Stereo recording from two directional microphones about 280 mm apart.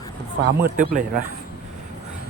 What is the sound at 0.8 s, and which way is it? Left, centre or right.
Speech, right.